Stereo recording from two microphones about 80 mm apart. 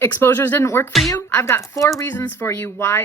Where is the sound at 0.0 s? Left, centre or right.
Left.